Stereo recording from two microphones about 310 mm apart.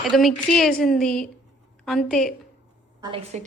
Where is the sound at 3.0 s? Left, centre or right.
Centre.